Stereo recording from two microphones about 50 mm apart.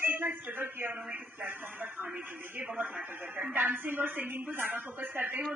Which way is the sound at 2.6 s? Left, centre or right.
Right.